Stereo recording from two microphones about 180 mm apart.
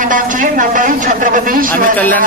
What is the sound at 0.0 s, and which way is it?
Speech, 45° right (ahead or behind).